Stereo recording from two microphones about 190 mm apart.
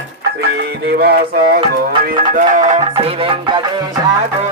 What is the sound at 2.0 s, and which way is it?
Music, 45° right (ahead or behind).